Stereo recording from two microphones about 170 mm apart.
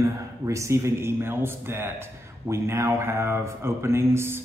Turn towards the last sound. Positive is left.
turn(degrees=-15)  # may be behind; listen again after turning